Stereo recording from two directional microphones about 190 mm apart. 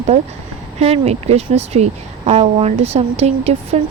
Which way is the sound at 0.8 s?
35° right (ahead or behind).